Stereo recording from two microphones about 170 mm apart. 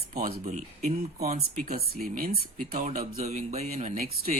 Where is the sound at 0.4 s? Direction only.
45° right (ahead or behind).